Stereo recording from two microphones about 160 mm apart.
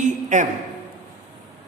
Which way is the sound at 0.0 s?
50° right (ahead or behind).